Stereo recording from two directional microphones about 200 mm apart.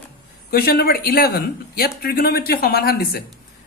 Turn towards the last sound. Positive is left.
turn(degrees=50)  # may be behind; listen again after turning